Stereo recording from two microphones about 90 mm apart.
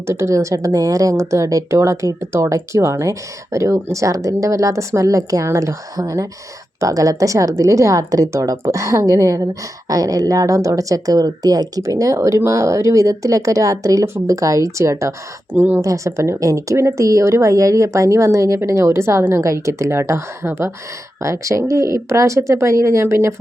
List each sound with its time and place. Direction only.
0.1 s a woman's voice: 30° right (ahead or behind)
15.5 s speech: 20° right (ahead or behind)
15.8 s a woman's voice: 35° right (ahead or behind)